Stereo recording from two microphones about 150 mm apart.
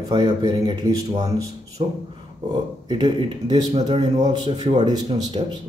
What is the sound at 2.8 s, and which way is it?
Speech, 30° right (ahead or behind).